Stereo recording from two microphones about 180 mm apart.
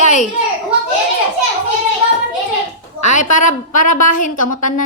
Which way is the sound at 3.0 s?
45° left (ahead or behind).